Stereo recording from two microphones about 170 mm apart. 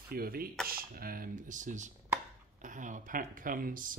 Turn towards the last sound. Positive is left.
turn(degrees=-55)  # may be behind; listen again after turning